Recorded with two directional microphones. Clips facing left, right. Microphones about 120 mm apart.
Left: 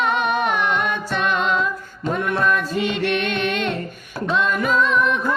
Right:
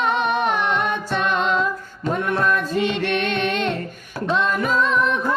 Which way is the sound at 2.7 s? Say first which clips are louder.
Even; 35° right (ahead or behind).